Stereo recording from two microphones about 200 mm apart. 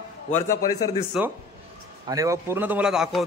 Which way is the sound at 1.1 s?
5° right (ahead or behind).